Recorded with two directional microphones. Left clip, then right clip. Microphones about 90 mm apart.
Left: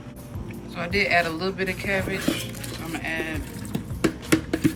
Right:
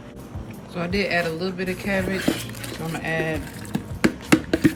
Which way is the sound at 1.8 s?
30° right (ahead or behind).